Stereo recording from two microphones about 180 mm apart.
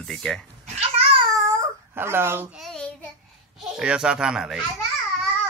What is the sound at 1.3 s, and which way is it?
Babbling, 20° right (ahead or behind).